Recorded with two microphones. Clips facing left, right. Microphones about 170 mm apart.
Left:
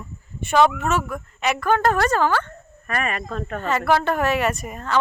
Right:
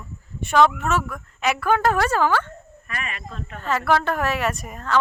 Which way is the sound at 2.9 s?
50° left (ahead or behind).